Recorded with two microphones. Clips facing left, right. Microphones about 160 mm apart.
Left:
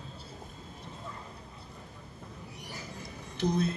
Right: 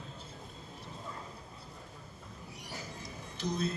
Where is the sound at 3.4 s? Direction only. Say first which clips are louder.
Left 6 dB; 60° left (ahead or behind).